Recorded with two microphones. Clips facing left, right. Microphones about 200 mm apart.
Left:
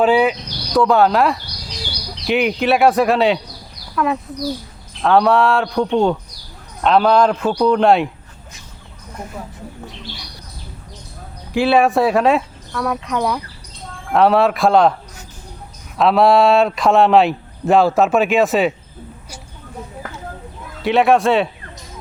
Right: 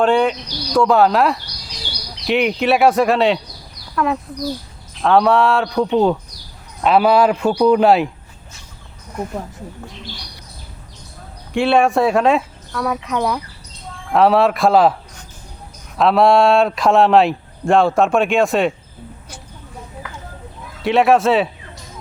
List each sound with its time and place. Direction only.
0.0 s speech: 5° left (ahead or behind)
11.5 s speech: centre (ahead or behind)
16.0 s speech: centre (ahead or behind)
20.0 s a sound: 45° left (ahead or behind)
20.8 s speech: centre (ahead or behind)